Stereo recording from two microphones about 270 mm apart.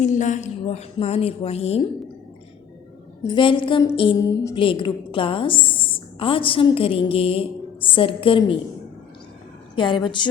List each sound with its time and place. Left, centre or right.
0.0 s a woman's voice: left
3.2 s a woman's voice: centre
9.7 s a woman's voice: centre